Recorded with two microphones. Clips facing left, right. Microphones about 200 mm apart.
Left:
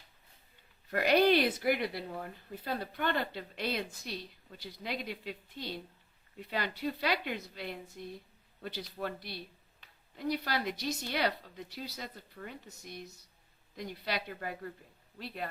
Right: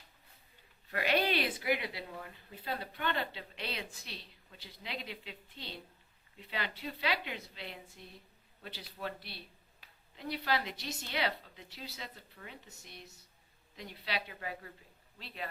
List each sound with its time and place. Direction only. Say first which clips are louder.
0.9 s a woman's voice: left 6 dB; 40° left (ahead or behind)